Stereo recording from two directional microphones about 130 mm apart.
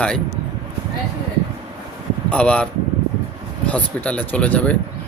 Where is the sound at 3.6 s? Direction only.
10° left (ahead or behind).